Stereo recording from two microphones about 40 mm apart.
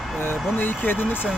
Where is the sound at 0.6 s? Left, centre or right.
Left.